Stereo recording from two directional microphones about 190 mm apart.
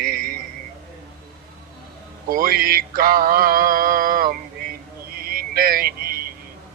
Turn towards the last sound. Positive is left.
turn(degrees=-50)  # may be behind; listen again after turning